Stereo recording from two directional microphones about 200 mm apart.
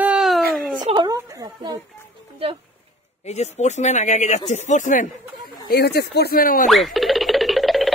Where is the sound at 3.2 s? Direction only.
35° left (ahead or behind).